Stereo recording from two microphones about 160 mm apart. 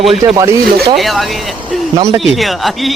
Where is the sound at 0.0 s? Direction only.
Centre (ahead or behind).